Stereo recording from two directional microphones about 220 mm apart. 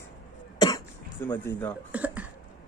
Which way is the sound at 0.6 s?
20° left (ahead or behind).